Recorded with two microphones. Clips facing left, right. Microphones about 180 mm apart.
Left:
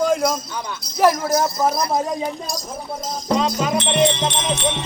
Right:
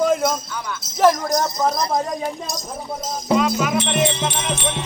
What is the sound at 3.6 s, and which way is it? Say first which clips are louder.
Speech: left 2 dB; 25° left (ahead or behind).